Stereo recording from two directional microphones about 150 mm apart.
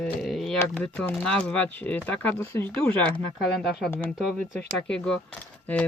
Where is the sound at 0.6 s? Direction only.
10° left (ahead or behind).